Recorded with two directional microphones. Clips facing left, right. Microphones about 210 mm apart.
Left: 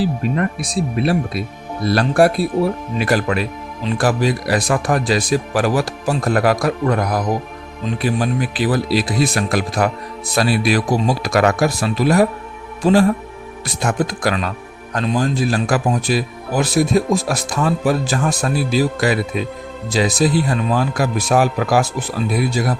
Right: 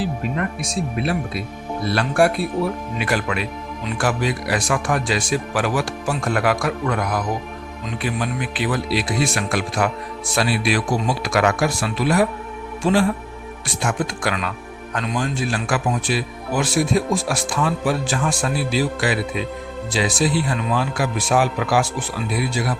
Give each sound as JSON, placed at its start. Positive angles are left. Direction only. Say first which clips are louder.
{"t": 0.0, "sound": "speech", "louder": "left 5 dB", "side_deg": 35}